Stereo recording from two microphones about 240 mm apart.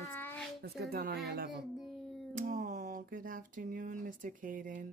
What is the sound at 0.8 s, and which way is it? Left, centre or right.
Speech, right.